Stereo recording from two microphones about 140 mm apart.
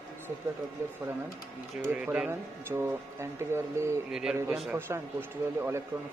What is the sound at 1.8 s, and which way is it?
Speech, 10° right (ahead or behind).